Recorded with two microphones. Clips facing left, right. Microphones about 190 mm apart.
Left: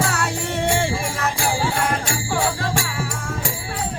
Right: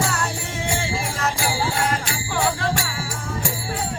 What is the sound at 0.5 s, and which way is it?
Music, 65° left (ahead or behind).